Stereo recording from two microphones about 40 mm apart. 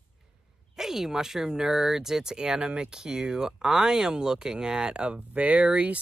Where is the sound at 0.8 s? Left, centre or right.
Centre.